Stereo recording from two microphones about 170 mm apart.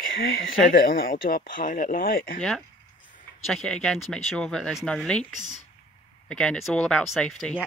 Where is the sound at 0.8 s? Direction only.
60° left (ahead or behind).